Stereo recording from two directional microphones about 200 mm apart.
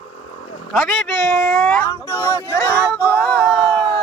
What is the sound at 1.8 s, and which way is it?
Speech, 10° left (ahead or behind).